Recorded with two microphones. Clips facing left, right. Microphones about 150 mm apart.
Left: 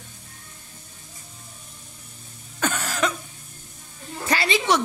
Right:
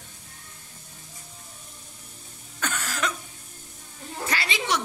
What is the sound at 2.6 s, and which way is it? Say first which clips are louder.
Cough: left 5 dB; 25° left (ahead or behind).